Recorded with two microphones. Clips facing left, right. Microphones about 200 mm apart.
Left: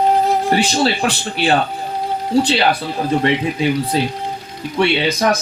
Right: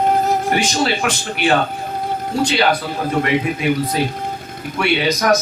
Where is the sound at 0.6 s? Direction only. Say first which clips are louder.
Left 2 dB; 35° left (ahead or behind).